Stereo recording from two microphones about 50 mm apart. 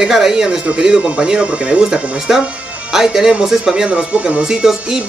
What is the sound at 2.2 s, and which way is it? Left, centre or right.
A man's voice, centre.